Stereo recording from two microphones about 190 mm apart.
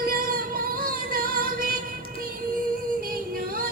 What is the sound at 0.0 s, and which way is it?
Music, 50° right (ahead or behind).